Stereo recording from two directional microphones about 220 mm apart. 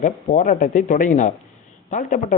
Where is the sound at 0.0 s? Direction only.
35° left (ahead or behind).